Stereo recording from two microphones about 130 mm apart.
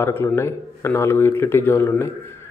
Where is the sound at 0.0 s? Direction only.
20° left (ahead or behind).